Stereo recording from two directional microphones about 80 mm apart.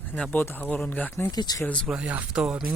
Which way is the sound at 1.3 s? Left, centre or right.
Left.